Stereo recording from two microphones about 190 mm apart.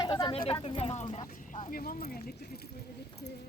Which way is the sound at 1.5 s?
45° left (ahead or behind).